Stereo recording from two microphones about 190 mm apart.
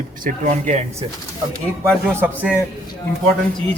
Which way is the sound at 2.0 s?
10° right (ahead or behind).